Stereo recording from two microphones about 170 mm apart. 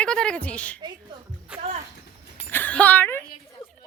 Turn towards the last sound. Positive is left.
turn(degrees=10)  # may be behind; listen again after turning